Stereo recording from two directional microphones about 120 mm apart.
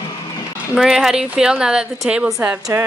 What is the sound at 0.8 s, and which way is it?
A woman's voice, centre (ahead or behind).